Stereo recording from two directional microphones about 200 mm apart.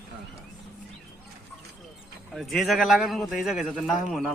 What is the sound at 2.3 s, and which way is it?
A man's voice, centre (ahead or behind).